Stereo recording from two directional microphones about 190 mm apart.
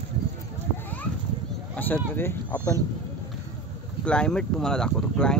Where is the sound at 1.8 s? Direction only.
10° left (ahead or behind).